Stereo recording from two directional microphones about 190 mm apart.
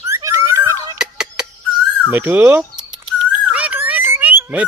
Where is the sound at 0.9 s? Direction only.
5° right (ahead or behind).